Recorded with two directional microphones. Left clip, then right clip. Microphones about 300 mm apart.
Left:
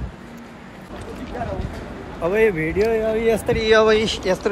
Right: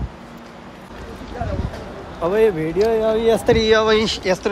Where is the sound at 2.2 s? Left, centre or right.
Centre.